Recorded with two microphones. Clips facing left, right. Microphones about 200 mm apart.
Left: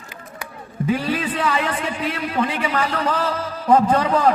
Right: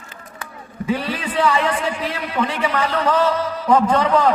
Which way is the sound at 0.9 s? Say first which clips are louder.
Left 1 dB; 30° right (ahead or behind).